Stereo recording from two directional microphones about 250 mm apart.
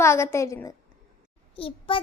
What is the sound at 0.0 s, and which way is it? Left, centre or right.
A child's voice, centre.